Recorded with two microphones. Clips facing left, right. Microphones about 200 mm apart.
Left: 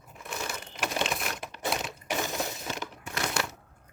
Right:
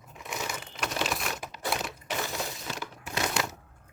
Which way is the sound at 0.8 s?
Centre (ahead or behind).